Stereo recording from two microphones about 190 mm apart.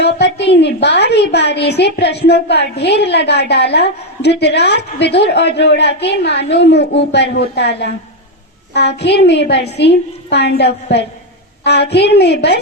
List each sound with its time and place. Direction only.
0.0 s a woman's voice: 65° left (ahead or behind)